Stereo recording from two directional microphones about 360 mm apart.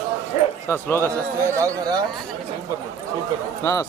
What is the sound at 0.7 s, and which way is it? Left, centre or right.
Speech, centre.